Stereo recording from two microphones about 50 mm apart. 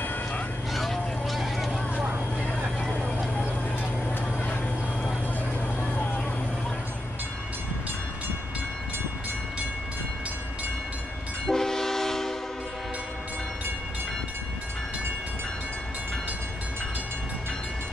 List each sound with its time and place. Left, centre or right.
0.7 s a sound: centre
2.4 s vehicle: left
5.9 s vehicle: left
11.4 s train: centre